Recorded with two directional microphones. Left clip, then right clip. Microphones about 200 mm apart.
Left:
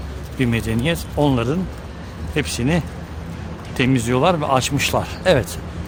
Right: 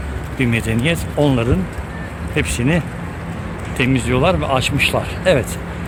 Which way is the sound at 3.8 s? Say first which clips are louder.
Right 1 dB; 30° left (ahead or behind).